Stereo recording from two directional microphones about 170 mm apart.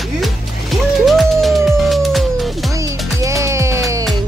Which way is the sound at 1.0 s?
Centre (ahead or behind).